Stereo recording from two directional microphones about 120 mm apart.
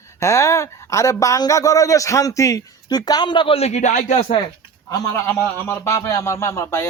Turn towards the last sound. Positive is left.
turn(degrees=25)  # may be behind; listen again after turning